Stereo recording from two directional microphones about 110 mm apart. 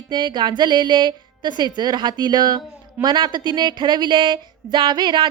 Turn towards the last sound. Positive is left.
turn(degrees=-45)  # may be behind; listen again after turning